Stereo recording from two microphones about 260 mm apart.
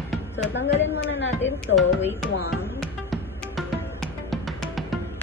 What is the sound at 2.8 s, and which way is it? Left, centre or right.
Music, centre.